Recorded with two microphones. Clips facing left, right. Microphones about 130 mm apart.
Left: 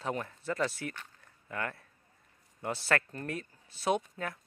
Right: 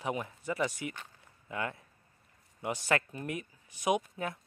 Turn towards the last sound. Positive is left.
turn(degrees=-20)  # may be behind; listen again after turning